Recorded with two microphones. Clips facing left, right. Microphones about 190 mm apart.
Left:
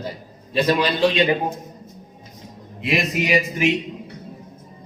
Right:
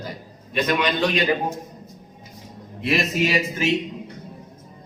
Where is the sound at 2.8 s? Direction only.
15° left (ahead or behind).